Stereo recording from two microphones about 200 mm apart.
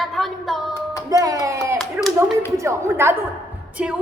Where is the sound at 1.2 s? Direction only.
15° right (ahead or behind).